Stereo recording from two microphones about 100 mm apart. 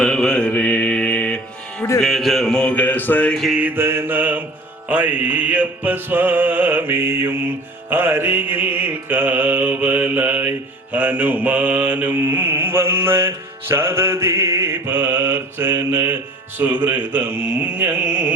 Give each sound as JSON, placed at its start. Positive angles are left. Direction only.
{"t": 0.0, "sound": "mantra", "side_deg": 5}
{"t": 2.0, "sound": "a sound", "side_deg": 0}
{"t": 3.3, "sound": "music", "side_deg": 0}
{"t": 3.6, "sound": "mantra", "side_deg": -25}